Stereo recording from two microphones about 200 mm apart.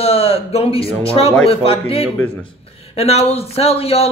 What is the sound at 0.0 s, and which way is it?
A man's voice, 30° left (ahead or behind).